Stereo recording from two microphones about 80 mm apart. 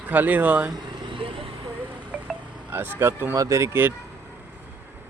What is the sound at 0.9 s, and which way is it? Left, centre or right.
Vehicle, right.